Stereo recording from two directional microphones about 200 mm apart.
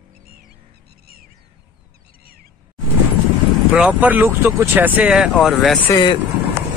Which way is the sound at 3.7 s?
5° right (ahead or behind).